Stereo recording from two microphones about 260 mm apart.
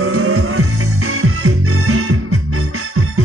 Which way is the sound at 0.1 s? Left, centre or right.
Right.